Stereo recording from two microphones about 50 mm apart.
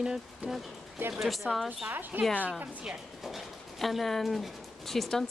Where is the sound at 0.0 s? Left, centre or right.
Centre.